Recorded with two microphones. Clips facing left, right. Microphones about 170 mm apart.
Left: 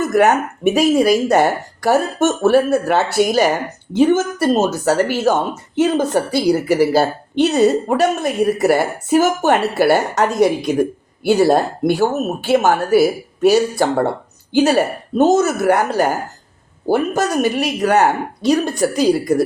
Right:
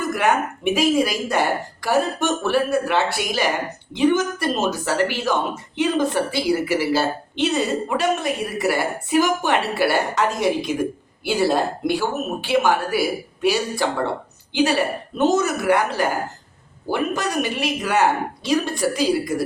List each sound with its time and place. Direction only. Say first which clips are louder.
0.1 s speech: left 6 dB; 45° left (ahead or behind)